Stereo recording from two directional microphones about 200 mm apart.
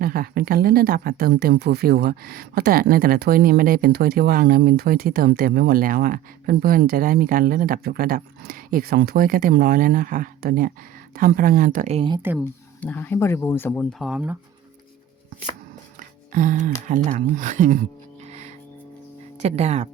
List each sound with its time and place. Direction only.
0.0 s speech: 45° right (ahead or behind); by 12.2 s 25° right (ahead or behind)
12.8 s speech: 10° left (ahead or behind)
14.0 s speech: 5° right (ahead or behind)
16.0 s music: 40° right (ahead or behind)
16.9 s speech: 40° right (ahead or behind)
18.3 s music: 35° right (ahead or behind)
19.4 s speech: 35° right (ahead or behind)